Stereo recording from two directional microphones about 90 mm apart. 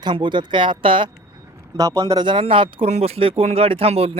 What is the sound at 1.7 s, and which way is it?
Speech, 40° right (ahead or behind).